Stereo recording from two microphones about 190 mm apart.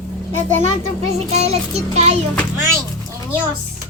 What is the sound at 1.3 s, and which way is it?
Child singing, 35° right (ahead or behind).